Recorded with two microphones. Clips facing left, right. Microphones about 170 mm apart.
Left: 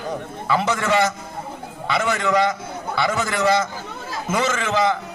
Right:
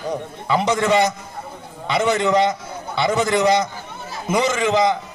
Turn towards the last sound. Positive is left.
turn(degrees=-15)  # may be behind; listen again after turning